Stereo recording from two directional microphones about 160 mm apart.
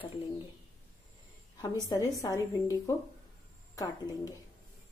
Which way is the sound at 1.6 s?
25° left (ahead or behind).